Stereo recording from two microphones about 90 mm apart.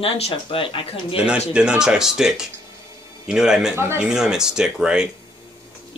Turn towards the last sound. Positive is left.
turn(degrees=-10)  # may be behind; listen again after turning